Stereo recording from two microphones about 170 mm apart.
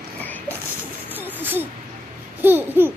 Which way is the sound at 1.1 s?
10° right (ahead or behind).